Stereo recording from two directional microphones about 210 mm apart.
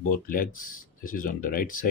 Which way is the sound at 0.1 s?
40° left (ahead or behind).